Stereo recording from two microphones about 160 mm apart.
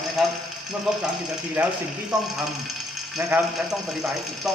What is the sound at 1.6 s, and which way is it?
Speech, 10° right (ahead or behind).